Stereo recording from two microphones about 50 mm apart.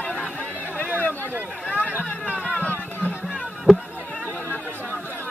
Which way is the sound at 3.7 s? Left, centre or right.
Centre.